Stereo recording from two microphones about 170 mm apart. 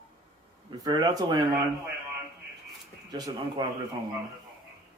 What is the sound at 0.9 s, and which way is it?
Speech, 25° right (ahead or behind).